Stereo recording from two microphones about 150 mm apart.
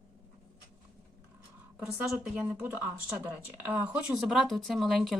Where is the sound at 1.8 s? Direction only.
5° right (ahead or behind).